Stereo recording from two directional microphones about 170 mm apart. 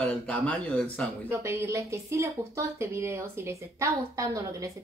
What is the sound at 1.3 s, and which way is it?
Speech, 15° right (ahead or behind).